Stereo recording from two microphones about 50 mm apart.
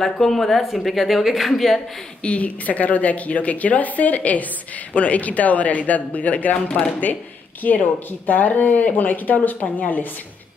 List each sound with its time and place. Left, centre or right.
0.0 s speech: centre
2.2 s a woman's voice: left